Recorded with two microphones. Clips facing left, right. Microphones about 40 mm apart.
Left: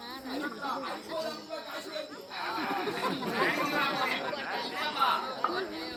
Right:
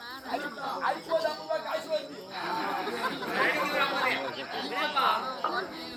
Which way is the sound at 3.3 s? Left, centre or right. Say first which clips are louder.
Right 3 dB; right.